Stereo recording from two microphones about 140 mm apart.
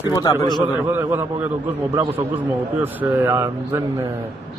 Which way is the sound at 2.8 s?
15° right (ahead or behind).